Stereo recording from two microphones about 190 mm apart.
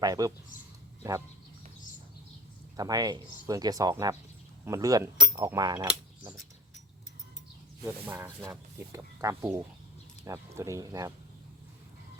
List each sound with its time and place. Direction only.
0.0 s speech: 20° right (ahead or behind)
2.7 s speech: 20° right (ahead or behind)
8.0 s speech: 10° right (ahead or behind)